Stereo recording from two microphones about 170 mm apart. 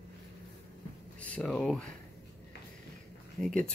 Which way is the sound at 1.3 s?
5° left (ahead or behind).